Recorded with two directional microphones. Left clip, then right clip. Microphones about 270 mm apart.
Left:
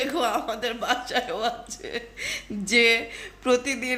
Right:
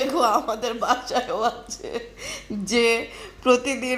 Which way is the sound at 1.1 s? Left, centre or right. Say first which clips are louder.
Right 3 dB; centre.